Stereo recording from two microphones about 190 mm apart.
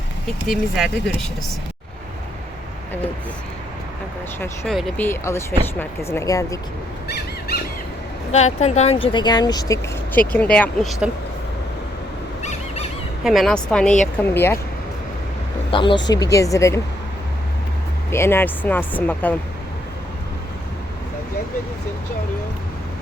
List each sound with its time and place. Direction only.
0.4 s speech: centre (ahead or behind)
4.6 s speech: centre (ahead or behind); by 6.6 s 15° left (ahead or behind)
7.1 s squawk: 55° left (ahead or behind)
8.3 s speech: 35° left (ahead or behind); by 10.9 s 5° left (ahead or behind)
12.4 s squeak: 35° left (ahead or behind)
13.2 s speech: centre (ahead or behind)
15.7 s speech: 25° left (ahead or behind)
18.1 s speech: 15° left (ahead or behind)